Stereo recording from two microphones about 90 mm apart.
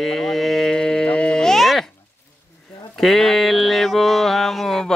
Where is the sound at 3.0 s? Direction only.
5° left (ahead or behind).